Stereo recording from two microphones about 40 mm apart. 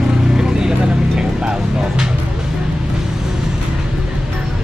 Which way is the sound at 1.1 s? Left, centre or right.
Right.